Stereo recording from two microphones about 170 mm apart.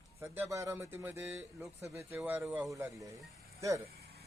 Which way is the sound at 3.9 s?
65° right (ahead or behind).